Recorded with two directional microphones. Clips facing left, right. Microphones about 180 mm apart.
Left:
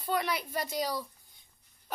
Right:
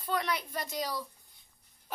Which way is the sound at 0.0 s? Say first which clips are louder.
Left 1 dB; 5° left (ahead or behind).